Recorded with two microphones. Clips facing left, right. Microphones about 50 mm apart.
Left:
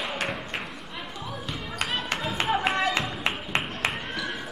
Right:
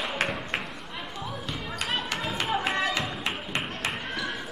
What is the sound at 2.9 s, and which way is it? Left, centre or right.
Music, left.